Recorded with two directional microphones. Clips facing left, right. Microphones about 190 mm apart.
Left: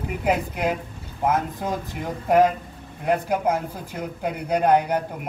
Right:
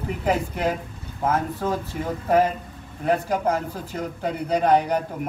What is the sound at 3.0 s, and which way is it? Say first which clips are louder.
A man's voice: even; 10° left (ahead or behind).